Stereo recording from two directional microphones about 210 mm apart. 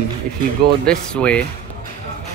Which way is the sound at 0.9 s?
5° left (ahead or behind).